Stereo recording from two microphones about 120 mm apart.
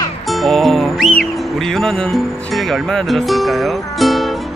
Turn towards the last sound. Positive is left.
turn(degrees=0)  # may be behind; listen again after turning